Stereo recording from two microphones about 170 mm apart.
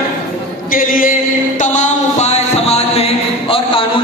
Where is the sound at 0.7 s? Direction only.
55° left (ahead or behind).